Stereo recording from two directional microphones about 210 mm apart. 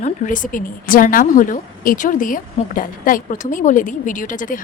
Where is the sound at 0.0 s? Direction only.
35° left (ahead or behind).